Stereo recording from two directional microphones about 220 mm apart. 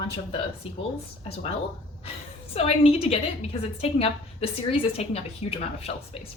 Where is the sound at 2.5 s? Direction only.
25° left (ahead or behind).